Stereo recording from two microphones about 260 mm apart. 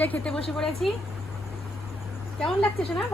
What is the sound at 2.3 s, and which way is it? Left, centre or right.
Speech, centre.